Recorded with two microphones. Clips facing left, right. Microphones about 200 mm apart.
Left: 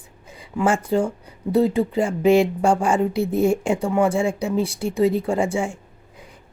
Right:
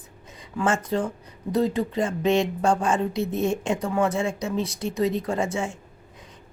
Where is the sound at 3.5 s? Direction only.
10° left (ahead or behind).